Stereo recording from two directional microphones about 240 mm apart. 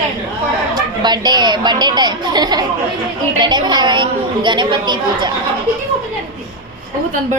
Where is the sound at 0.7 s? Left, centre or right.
Centre.